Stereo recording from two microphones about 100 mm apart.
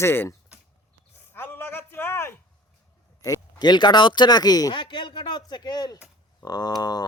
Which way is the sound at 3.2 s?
35° left (ahead or behind).